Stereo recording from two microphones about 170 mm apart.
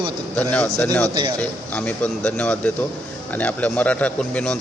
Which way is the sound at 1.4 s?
10° left (ahead or behind).